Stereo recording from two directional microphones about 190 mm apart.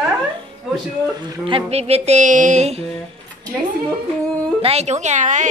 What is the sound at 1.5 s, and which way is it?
A woman's voice, 30° right (ahead or behind).